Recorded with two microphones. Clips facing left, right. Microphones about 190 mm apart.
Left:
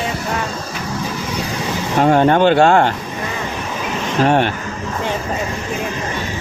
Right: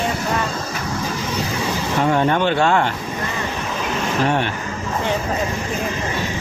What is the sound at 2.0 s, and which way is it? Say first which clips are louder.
Speech: left 6 dB; 40° left (ahead or behind).